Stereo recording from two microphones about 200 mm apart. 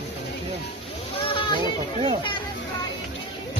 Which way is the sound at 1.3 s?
25° left (ahead or behind).